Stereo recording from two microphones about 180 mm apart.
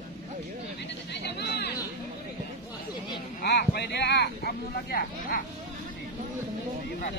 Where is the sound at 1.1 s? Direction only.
70° left (ahead or behind).